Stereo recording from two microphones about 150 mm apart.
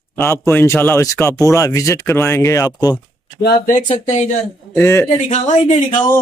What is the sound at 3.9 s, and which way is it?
Speech, 50° left (ahead or behind).